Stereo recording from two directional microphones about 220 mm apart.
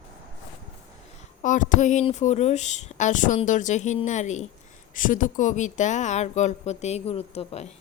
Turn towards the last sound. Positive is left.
turn(degrees=30)  # may be behind; listen again after turning